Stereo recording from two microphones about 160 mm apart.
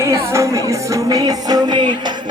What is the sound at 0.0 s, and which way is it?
Speech, 20° right (ahead or behind).